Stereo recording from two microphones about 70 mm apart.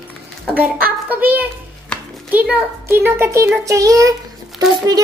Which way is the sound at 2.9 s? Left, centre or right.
Right.